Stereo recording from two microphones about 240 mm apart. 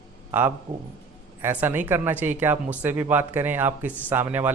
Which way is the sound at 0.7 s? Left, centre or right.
Right.